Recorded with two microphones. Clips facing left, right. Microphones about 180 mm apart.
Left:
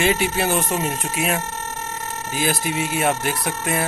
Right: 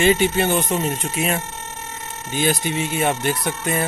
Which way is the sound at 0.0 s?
Centre (ahead or behind).